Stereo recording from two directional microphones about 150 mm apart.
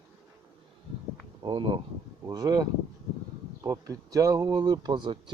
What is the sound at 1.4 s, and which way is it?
Speech, 30° right (ahead or behind).